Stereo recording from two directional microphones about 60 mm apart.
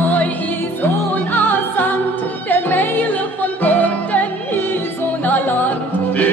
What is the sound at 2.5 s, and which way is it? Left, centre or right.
Music, left.